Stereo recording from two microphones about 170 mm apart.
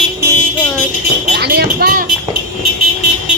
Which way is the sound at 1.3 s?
70° right (ahead or behind).